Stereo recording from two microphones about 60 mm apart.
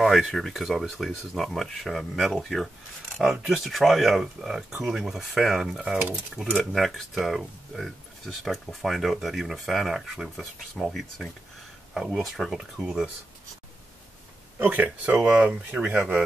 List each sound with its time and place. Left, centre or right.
0.0 s speech: centre
6.7 s speech: centre
14.6 s speech: right
15.0 s speech: centre